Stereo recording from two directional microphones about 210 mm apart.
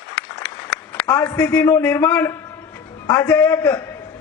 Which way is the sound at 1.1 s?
15° left (ahead or behind).